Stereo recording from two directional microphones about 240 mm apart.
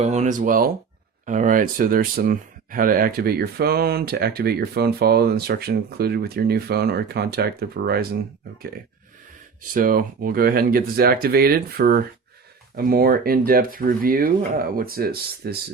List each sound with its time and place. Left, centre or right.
0.0 s speech: right
9.7 s speech: right